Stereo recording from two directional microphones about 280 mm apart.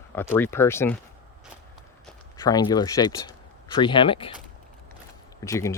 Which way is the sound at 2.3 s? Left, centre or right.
Centre.